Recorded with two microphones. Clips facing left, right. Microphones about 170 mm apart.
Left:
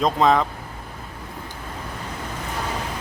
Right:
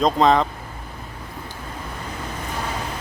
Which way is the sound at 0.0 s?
Centre (ahead or behind).